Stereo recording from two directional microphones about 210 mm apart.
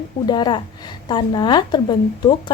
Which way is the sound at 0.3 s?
20° left (ahead or behind).